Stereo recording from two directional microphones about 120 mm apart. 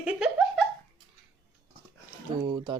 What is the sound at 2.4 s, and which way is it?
Speech, 40° right (ahead or behind).